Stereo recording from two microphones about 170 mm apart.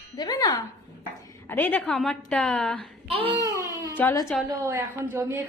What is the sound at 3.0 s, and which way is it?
Speech, 35° right (ahead or behind).